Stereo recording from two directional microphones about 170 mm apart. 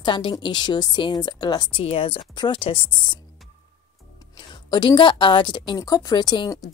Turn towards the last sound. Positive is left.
turn(degrees=25)  # may be behind; listen again after turning